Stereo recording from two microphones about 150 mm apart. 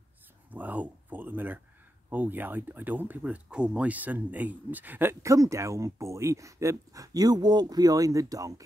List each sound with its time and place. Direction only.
0.5 s speech: 10° right (ahead or behind)